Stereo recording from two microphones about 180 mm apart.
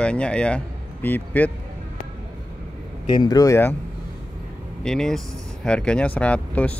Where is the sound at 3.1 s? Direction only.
25° left (ahead or behind).